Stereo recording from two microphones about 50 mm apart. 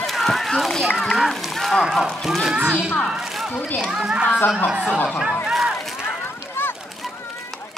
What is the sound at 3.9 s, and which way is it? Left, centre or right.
Speech, centre.